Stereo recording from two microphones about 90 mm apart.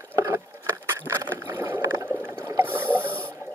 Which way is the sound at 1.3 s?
30° right (ahead or behind).